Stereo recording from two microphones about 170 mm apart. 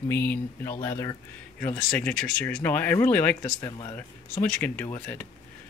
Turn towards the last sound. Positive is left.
turn(degrees=10)  # may be behind; listen again after turning